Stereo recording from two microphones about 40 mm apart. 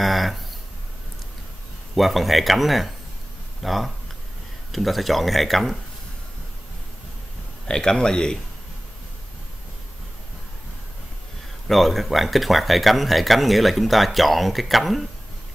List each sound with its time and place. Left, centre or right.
0.0 s a sound: centre
2.0 s speech: centre
7.6 s speech: centre
11.6 s speech: centre